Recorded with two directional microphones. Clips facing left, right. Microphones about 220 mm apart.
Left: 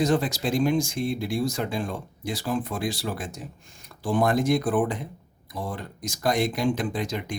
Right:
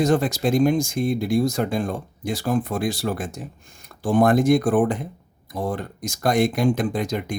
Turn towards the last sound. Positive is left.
turn(degrees=-50)  # may be behind; listen again after turning